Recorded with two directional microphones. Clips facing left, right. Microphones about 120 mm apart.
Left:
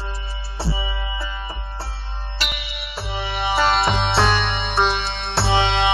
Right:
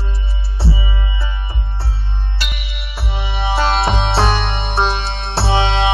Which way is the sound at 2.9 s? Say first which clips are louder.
Right 1 dB; 10° right (ahead or behind).